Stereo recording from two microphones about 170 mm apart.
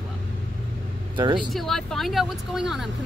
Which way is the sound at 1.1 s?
25° right (ahead or behind).